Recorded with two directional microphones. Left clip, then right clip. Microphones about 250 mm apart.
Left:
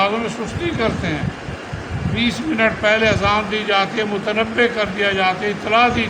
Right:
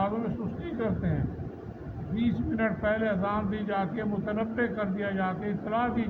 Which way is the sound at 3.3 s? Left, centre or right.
Centre.